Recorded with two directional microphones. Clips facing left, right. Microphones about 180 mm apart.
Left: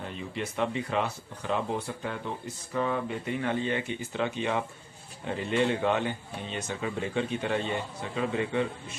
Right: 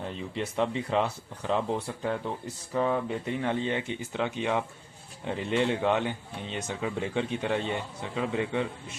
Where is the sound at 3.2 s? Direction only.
25° right (ahead or behind).